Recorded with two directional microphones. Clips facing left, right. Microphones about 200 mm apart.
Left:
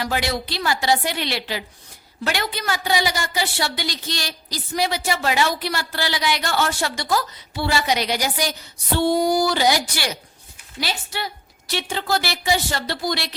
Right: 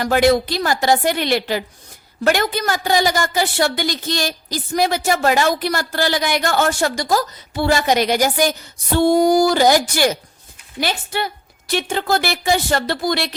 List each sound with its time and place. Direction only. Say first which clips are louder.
0.0 s a woman's voice: right 10 dB; 50° right (ahead or behind)